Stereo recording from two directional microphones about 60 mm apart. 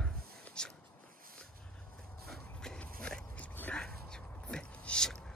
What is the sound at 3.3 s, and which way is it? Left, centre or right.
Dog, left.